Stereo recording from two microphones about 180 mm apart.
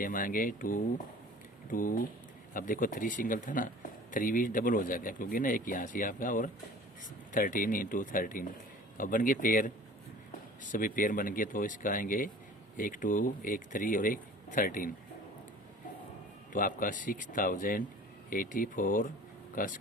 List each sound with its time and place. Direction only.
0.0 s speech: 50° left (ahead or behind)
16.5 s speech: 50° left (ahead or behind)